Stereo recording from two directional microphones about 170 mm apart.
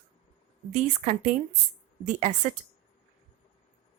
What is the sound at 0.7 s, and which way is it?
Speech, 45° right (ahead or behind).